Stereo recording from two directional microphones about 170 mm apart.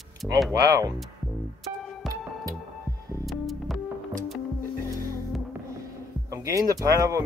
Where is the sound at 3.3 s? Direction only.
Centre (ahead or behind).